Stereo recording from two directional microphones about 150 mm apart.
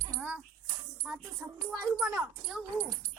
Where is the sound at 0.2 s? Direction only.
10° right (ahead or behind).